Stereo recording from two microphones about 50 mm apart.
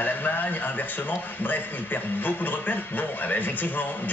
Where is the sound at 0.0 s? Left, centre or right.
Left.